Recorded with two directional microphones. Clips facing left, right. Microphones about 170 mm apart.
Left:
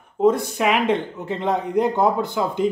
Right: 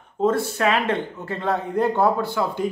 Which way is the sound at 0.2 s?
15° left (ahead or behind).